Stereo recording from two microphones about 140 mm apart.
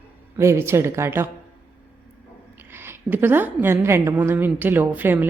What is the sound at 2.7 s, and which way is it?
A woman's voice, 15° right (ahead or behind).